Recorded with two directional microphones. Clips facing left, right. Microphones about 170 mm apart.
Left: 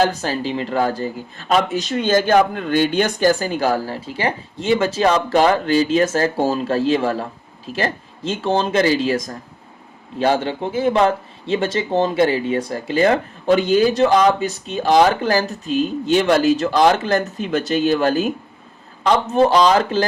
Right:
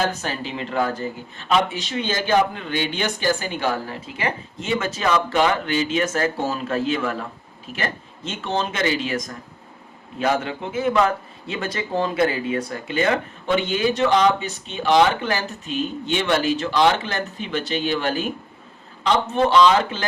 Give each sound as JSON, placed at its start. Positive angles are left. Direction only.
{"t": 0.0, "sound": "speech", "side_deg": 35}